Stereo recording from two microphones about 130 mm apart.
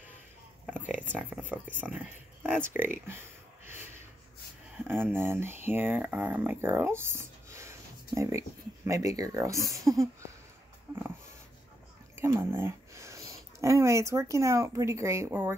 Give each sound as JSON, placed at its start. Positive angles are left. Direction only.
{"t": 0.7, "sound": "a sound", "side_deg": -15}
{"t": 1.1, "sound": "speech", "side_deg": -10}
{"t": 4.8, "sound": "speech", "side_deg": -15}
{"t": 12.2, "sound": "speech", "side_deg": -20}